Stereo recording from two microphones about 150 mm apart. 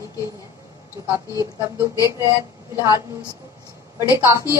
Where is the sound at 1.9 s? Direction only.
25° left (ahead or behind).